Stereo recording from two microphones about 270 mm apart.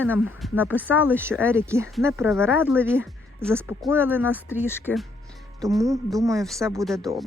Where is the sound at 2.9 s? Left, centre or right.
Centre.